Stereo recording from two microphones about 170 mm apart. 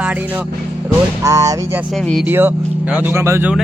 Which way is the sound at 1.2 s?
20° right (ahead or behind).